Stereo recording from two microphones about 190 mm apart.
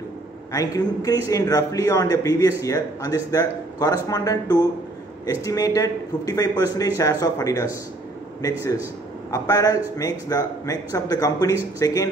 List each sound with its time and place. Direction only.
0.5 s a man's voice: 20° left (ahead or behind)
9.3 s a man's voice: 15° left (ahead or behind)